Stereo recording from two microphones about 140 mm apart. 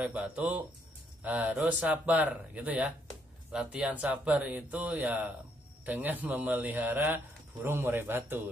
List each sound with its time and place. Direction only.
0.0 s speech: 10° right (ahead or behind)